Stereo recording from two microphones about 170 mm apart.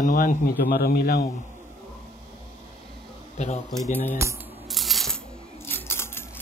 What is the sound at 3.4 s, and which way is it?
Speech, 40° left (ahead or behind).